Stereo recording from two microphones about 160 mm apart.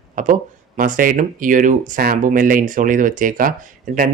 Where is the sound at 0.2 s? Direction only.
55° right (ahead or behind).